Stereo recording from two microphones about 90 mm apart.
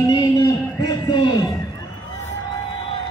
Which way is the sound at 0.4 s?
40° left (ahead or behind).